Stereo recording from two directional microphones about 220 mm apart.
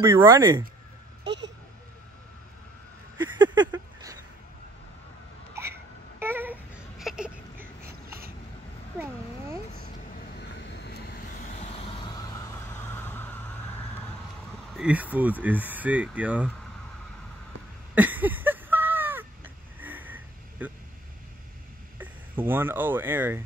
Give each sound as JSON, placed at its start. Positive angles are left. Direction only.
{"t": 0.0, "sound": "speech", "side_deg": -10}
{"t": 1.2, "sound": "vehicle", "side_deg": -50}
{"t": 3.7, "sound": "a sound", "side_deg": -15}
{"t": 5.5, "sound": "babbling", "side_deg": -10}
{"t": 7.8, "sound": "a sound", "side_deg": -40}
{"t": 9.0, "sound": "a sound", "side_deg": -10}
{"t": 10.7, "sound": "vehicle", "side_deg": 45}
{"t": 12.1, "sound": "vehicle", "side_deg": 15}
{"t": 14.8, "sound": "speech", "side_deg": -5}
{"t": 17.9, "sound": "crow", "side_deg": -10}
{"t": 21.9, "sound": "speech", "side_deg": -10}